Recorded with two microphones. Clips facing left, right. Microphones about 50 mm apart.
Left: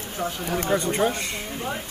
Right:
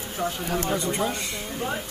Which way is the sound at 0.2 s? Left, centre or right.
Centre.